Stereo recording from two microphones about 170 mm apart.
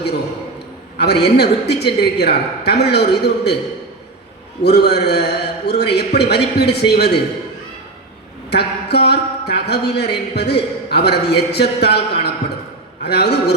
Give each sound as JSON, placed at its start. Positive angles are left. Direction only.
{"t": 0.9, "sound": "speech", "side_deg": 80}
{"t": 4.6, "sound": "speech", "side_deg": 75}
{"t": 8.4, "sound": "a man's voice", "side_deg": 75}